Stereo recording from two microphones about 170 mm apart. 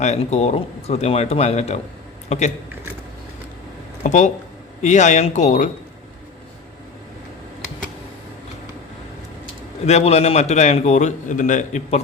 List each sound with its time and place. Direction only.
0.0 s a man's voice: 40° left (ahead or behind)
4.0 s speech: 45° left (ahead or behind)
9.8 s a man's voice: 40° left (ahead or behind)